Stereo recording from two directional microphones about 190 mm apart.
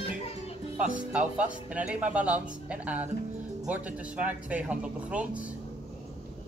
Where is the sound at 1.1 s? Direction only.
5° right (ahead or behind).